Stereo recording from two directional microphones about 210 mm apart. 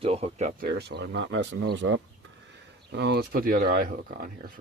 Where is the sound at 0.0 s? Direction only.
30° right (ahead or behind).